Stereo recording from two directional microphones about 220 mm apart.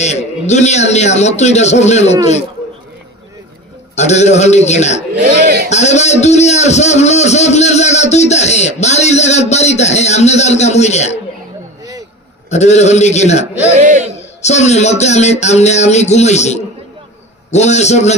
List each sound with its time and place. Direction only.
0.0 s a man's voice: 30° left (ahead or behind)
3.9 s a man's voice: 30° left (ahead or behind)
12.4 s a man's voice: 30° left (ahead or behind)
13.7 s a man's voice: 35° right (ahead or behind)
14.4 s a man's voice: 30° left (ahead or behind)